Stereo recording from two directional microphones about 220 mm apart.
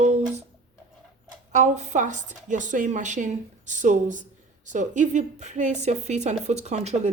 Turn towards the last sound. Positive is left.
turn(degrees=-30)  # may be behind; listen again after turning